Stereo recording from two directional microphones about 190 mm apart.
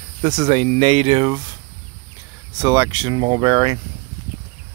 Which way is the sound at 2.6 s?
20° right (ahead or behind).